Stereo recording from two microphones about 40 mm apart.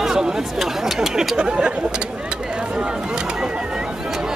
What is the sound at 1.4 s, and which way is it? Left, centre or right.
Speech, right.